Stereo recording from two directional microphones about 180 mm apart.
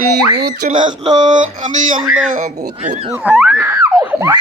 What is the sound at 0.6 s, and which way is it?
Speech, 45° right (ahead or behind).